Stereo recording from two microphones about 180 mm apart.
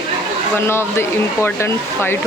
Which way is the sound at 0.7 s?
15° left (ahead or behind).